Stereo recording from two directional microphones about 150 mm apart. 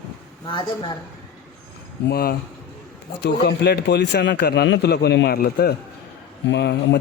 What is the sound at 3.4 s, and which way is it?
A man's voice, 90° left.